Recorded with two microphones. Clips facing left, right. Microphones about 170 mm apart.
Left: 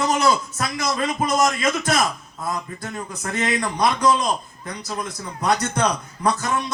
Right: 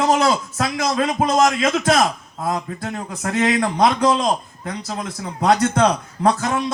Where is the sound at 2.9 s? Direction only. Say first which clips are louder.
Right 5 dB; 60° right (ahead or behind); by 3.6 s 85° right.